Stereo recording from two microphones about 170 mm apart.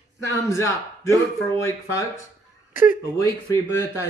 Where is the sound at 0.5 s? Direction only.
20° left (ahead or behind).